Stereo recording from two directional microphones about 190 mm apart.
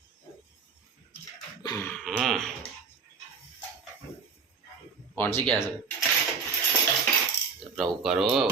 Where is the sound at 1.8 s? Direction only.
Centre (ahead or behind).